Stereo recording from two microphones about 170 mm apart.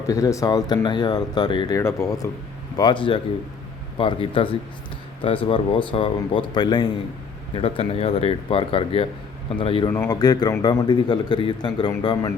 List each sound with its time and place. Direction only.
0.1 s speech: 20° left (ahead or behind)
9.9 s speech: 15° left (ahead or behind)